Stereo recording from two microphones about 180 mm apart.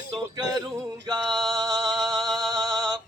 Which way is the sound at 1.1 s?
25° right (ahead or behind).